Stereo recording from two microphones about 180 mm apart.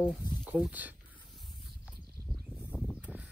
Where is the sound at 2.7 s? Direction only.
Centre (ahead or behind).